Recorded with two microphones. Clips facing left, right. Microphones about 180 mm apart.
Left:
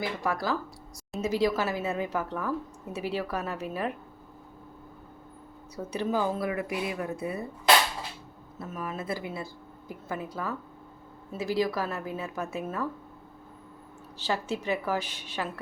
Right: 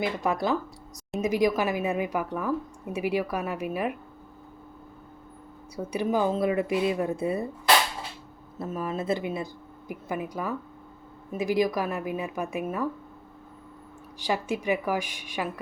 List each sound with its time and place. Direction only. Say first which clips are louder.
0.0 s speech: right 4 dB; 20° right (ahead or behind)
5.7 s speech: right 3 dB; 10° right (ahead or behind); by 7.4 s 30° right (ahead or behind)
8.5 s speech: right 5 dB; 30° right (ahead or behind)
14.2 s speech: right 2 dB; 15° right (ahead or behind)